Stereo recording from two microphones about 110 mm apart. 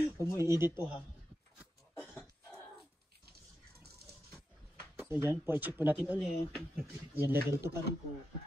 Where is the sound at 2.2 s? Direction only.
Centre (ahead or behind).